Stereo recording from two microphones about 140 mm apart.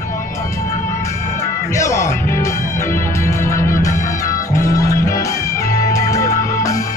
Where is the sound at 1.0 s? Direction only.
20° left (ahead or behind).